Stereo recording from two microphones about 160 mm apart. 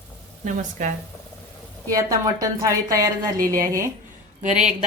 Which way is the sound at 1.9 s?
20° right (ahead or behind).